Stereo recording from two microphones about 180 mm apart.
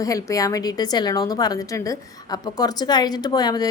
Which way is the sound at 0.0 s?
20° left (ahead or behind).